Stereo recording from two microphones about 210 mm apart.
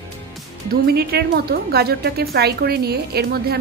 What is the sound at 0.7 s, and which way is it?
A woman's voice, 50° right (ahead or behind).